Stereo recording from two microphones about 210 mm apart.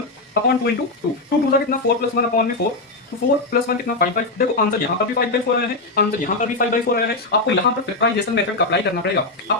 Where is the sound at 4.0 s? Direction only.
45° left (ahead or behind).